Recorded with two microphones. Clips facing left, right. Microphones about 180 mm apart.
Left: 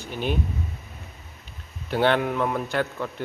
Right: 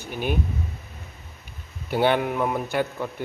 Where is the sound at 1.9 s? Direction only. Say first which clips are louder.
Even; 10° right (ahead or behind).